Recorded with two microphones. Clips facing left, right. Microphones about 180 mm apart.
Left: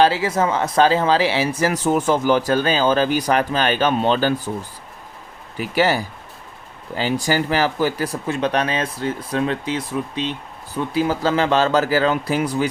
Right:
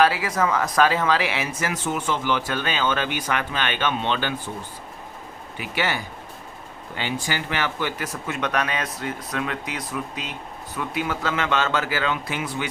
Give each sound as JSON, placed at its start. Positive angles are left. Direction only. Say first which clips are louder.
{"t": 0.0, "sound": "speech", "louder": "left 4 dB", "side_deg": 25}
{"t": 5.5, "sound": "speech", "louder": "left 8 dB", "side_deg": 40}